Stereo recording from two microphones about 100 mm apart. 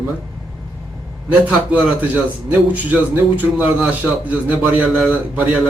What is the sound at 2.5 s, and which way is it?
A man's voice, 15° right (ahead or behind).